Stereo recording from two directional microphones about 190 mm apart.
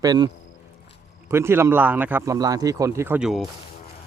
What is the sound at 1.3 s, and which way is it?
Speech, 15° right (ahead or behind).